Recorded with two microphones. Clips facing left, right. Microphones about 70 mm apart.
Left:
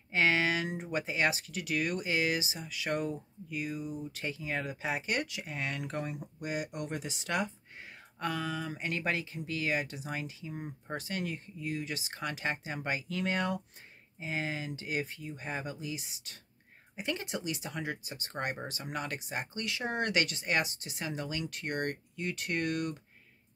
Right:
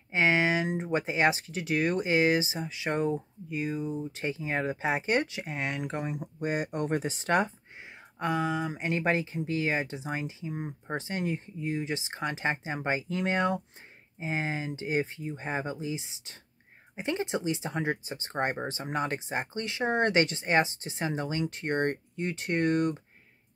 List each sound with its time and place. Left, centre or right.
0.1 s speech: right
6.4 s speech: right
8.2 s speech: right